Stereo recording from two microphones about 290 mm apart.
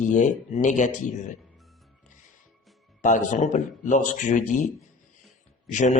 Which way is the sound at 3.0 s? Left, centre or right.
Left.